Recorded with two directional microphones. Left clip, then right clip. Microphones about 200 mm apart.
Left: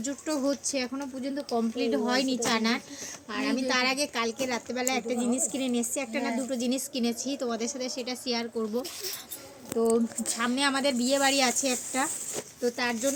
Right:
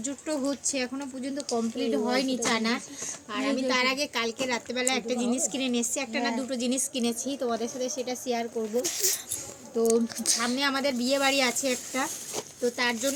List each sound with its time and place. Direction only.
0.0 s speech: centre (ahead or behind)
7.3 s speech: 10° left (ahead or behind)
7.9 s speech: 30° left (ahead or behind)
8.8 s speech: 25° right (ahead or behind)
9.7 s speech: 5° right (ahead or behind)
10.3 s speech: 15° left (ahead or behind); by 13.1 s centre (ahead or behind)